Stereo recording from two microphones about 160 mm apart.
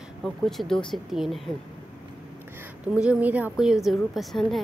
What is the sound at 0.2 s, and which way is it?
Speech, centre (ahead or behind).